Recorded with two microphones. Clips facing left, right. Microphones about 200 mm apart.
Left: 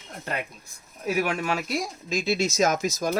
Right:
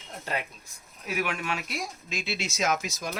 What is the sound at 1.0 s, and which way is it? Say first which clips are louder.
Speech: left 5 dB; 35° left (ahead or behind).